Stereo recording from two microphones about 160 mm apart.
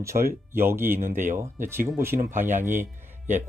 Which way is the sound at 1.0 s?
55° right (ahead or behind).